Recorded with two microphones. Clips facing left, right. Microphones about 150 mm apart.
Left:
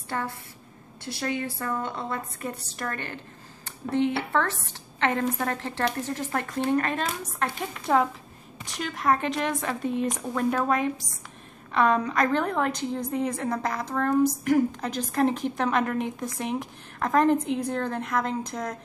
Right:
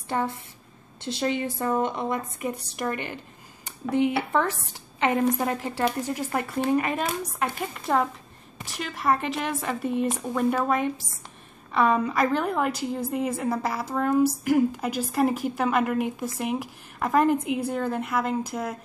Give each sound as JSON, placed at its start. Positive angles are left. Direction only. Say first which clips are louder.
{"t": 0.1, "sound": "a woman's voice", "louder": "right 4 dB", "side_deg": -20}